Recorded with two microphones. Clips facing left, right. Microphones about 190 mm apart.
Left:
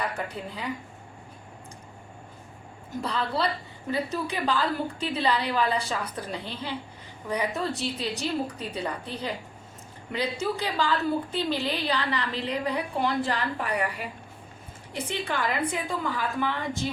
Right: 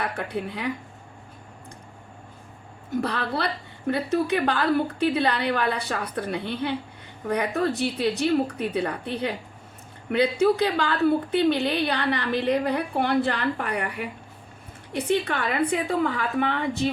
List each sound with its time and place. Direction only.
0.0 s speech: 70° right (ahead or behind)
3.0 s a woman's voice: 65° right (ahead or behind)